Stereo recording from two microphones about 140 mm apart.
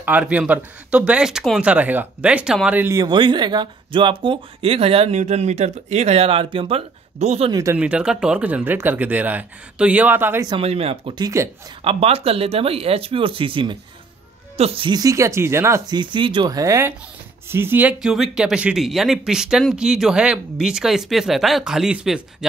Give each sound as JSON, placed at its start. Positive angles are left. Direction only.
{"t": 0.0, "sound": "speech", "side_deg": -10}
{"t": 2.8, "sound": "speech", "side_deg": -25}
{"t": 7.2, "sound": "speech", "side_deg": -50}
{"t": 7.7, "sound": "speech", "side_deg": -10}
{"t": 10.6, "sound": "speech", "side_deg": -45}
{"t": 11.1, "sound": "speech", "side_deg": -25}
{"t": 11.8, "sound": "speech", "side_deg": -45}
{"t": 15.0, "sound": "speech", "side_deg": -20}
{"t": 15.9, "sound": "speech", "side_deg": -35}